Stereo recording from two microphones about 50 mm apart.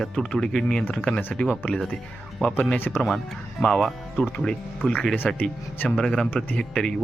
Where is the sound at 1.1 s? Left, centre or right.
Left.